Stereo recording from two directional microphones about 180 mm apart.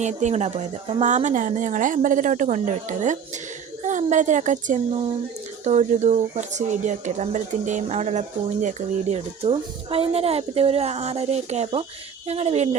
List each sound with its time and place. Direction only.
0.0 s speech: 40° right (ahead or behind)